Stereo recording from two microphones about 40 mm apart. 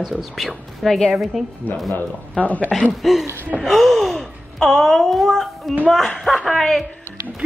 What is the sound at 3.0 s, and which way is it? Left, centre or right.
Speech, centre.